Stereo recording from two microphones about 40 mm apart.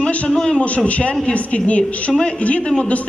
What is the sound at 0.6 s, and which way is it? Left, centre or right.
A man's voice, left.